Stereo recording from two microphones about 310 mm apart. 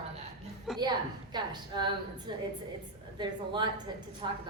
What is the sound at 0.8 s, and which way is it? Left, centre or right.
A woman's voice, centre.